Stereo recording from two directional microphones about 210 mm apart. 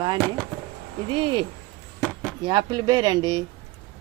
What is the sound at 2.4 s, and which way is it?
Speech, 20° right (ahead or behind).